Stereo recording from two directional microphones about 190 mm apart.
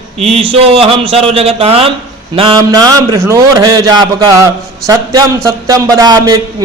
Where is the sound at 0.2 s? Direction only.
30° right (ahead or behind).